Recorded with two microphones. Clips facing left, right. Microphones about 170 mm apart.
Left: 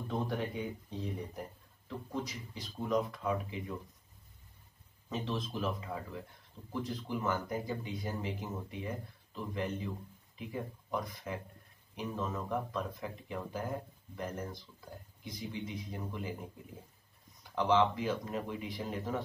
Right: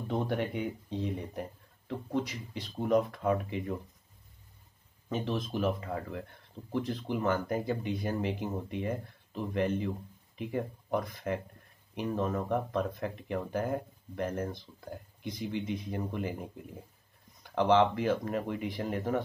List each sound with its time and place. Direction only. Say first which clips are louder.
0.1 s speech: right 4 dB; 65° right (ahead or behind)
5.1 s speech: right 4 dB; 60° right (ahead or behind)
17.6 s speech: right 4 dB; 60° right (ahead or behind)